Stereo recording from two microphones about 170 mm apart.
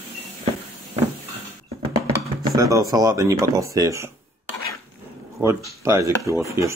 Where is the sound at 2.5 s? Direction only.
20° right (ahead or behind).